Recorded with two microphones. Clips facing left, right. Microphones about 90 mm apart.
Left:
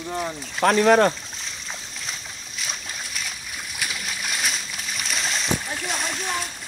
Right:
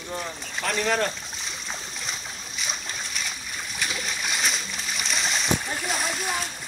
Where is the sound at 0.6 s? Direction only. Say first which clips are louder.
Left 9 dB; 55° left (ahead or behind).